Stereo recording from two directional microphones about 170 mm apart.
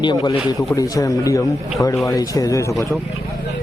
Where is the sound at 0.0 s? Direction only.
20° left (ahead or behind).